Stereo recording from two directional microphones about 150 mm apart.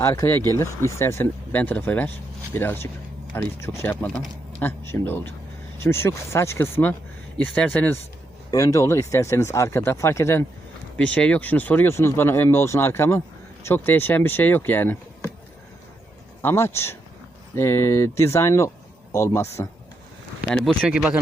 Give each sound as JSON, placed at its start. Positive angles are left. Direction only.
{"t": 0.0, "sound": "speech", "side_deg": 20}
{"t": 4.0, "sound": "speech", "side_deg": 0}
{"t": 4.9, "sound": "speech", "side_deg": 15}
{"t": 8.4, "sound": "speech", "side_deg": 20}
{"t": 16.4, "sound": "speech", "side_deg": 15}
{"t": 20.5, "sound": "speech", "side_deg": 5}
{"t": 20.8, "sound": "speech", "side_deg": -5}